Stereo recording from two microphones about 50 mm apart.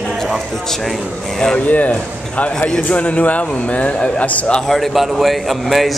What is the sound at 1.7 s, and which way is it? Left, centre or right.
Speech, left.